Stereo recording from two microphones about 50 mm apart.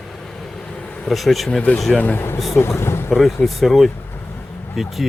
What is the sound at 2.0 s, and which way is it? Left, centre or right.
Speech, left.